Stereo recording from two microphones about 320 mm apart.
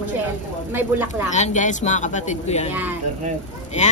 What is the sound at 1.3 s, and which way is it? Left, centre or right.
Speech, left.